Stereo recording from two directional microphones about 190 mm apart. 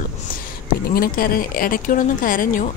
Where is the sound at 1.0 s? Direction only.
50° left (ahead or behind).